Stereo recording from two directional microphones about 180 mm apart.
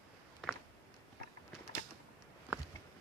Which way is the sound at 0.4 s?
5° left (ahead or behind).